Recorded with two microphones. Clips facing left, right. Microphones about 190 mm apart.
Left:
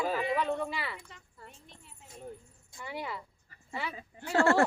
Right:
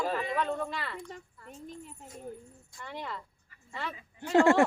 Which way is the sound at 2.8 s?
10° left (ahead or behind).